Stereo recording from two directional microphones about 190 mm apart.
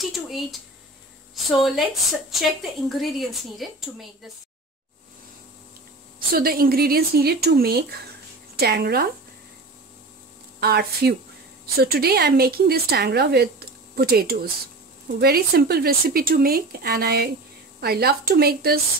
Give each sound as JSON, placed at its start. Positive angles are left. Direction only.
{"t": 0.0, "sound": "a sound", "side_deg": 0}
{"t": 1.3, "sound": "a woman's voice", "side_deg": 0}
{"t": 6.1, "sound": "speech", "side_deg": -50}
{"t": 10.6, "sound": "speech", "side_deg": -55}